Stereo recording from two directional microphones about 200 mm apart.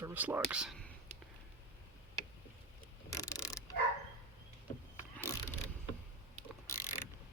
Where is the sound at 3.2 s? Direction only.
15° left (ahead or behind).